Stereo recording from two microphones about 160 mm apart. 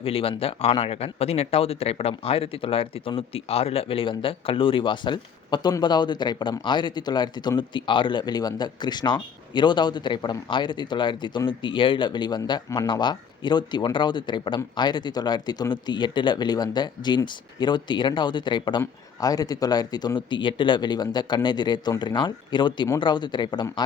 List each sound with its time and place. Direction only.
0.0 s speech: 35° left (ahead or behind)